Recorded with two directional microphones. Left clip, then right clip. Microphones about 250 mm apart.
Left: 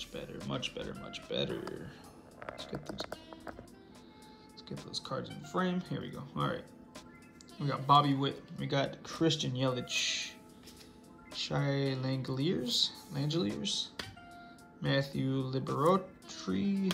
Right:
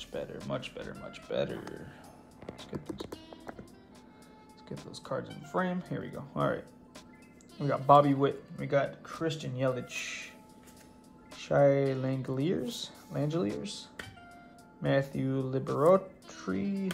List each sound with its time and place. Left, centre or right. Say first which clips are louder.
0.0 s speech: right 4 dB; centre
4.6 s speech: right 1 dB; centre
9.7 s speech: left 1 dB; centre
11.3 s speech: right 10 dB; centre